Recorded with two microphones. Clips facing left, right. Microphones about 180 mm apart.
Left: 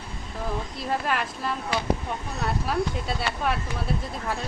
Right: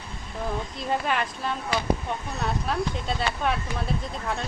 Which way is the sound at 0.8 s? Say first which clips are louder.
Right 1 dB; centre (ahead or behind).